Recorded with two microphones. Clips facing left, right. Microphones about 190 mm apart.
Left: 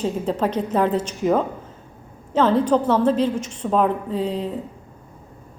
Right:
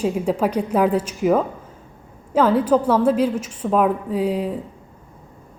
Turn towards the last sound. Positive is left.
turn(degrees=-10)  # may be behind; listen again after turning